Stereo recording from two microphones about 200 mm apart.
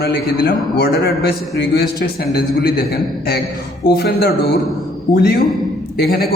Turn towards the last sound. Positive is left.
turn(degrees=50)  # may be behind; listen again after turning